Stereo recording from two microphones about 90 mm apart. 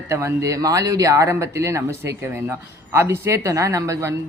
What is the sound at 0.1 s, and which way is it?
Speech, 30° right (ahead or behind).